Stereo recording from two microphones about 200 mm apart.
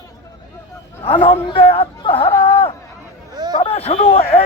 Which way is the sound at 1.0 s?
25° left (ahead or behind).